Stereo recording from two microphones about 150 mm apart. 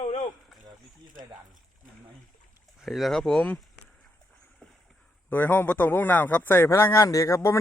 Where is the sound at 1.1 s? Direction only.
60° right (ahead or behind).